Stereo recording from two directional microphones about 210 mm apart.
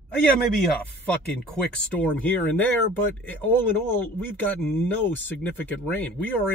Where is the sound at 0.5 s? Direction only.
5° left (ahead or behind).